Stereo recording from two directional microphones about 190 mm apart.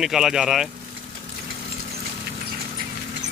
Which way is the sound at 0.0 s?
Centre (ahead or behind).